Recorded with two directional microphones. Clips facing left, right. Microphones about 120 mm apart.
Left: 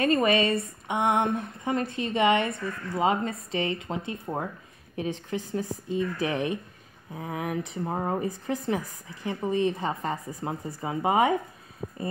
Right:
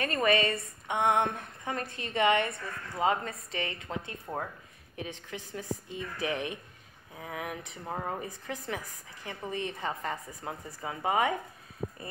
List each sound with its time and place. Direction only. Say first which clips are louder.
0.0 s speech: left 5 dB; 20° left (ahead or behind)
4.9 s speech: left 9 dB; 35° left (ahead or behind)